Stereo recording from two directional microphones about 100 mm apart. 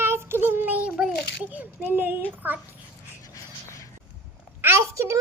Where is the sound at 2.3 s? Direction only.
20° right (ahead or behind).